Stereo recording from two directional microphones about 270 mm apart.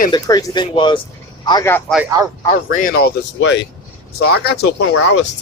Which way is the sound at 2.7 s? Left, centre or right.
Left.